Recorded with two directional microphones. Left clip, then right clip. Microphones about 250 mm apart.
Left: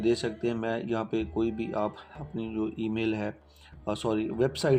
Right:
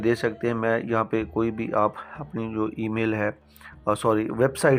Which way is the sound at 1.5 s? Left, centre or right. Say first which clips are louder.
Right 3 dB; right.